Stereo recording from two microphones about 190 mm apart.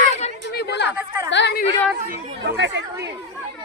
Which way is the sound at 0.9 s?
10° right (ahead or behind).